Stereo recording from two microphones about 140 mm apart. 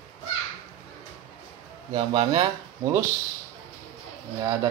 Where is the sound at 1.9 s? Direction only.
40° right (ahead or behind).